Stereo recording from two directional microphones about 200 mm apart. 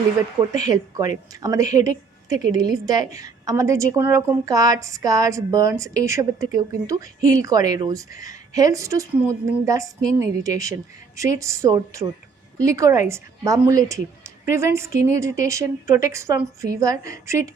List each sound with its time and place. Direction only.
0.5 s a woman's voice: 20° right (ahead or behind)